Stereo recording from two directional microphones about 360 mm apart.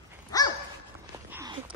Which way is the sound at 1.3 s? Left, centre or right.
Centre.